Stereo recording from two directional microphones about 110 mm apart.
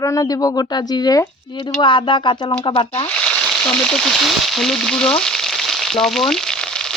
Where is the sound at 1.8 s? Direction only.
45° left (ahead or behind).